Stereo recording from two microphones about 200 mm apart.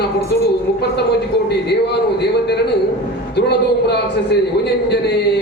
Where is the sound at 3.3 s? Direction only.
55° left (ahead or behind).